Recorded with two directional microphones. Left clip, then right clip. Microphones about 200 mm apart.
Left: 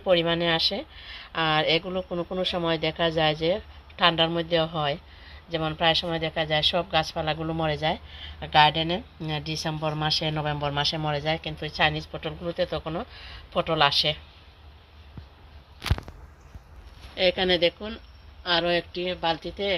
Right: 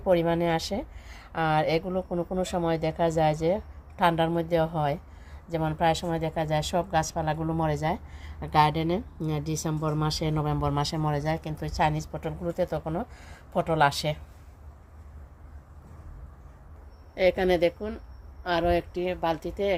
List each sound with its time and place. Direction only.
0.0 s a woman's voice: 15° right (ahead or behind)
17.2 s a woman's voice: 10° right (ahead or behind)